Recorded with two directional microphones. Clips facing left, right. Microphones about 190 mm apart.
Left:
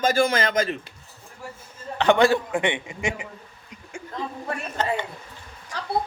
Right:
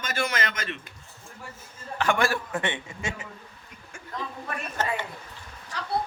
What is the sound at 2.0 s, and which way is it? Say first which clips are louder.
Speech: left 7 dB; 20° left (ahead or behind).